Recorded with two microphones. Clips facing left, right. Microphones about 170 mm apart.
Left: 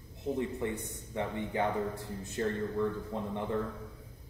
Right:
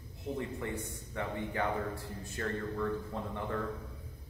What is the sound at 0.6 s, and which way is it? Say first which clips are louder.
A man's voice: left 3 dB; 20° left (ahead or behind).